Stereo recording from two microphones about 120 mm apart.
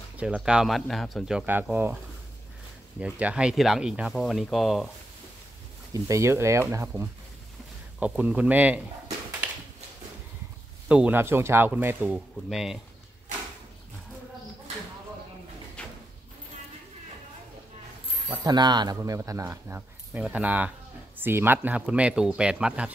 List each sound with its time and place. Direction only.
0.2 s speech: 10° right (ahead or behind)
1.4 s speech: 15° right (ahead or behind)
3.0 s speech: 10° right (ahead or behind)
6.0 s speech: 25° right (ahead or behind)
8.0 s speech: 10° right (ahead or behind)
10.9 s speech: 10° right (ahead or behind)
12.4 s speech: 5° right (ahead or behind)
15.8 s a sound: 10° left (ahead or behind)
18.4 s speech: 35° right (ahead or behind)
18.9 s speech: 25° right (ahead or behind)
20.1 s speech: 10° right (ahead or behind)